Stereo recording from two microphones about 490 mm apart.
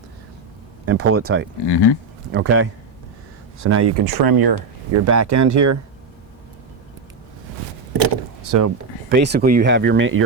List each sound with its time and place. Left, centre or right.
0.9 s speech: right
1.6 s speech: left
2.3 s speech: right
4.1 s speech: right
4.9 s speech: right
8.4 s speech: right
9.0 s speech: centre